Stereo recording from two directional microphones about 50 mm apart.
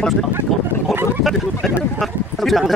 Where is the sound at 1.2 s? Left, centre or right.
Centre.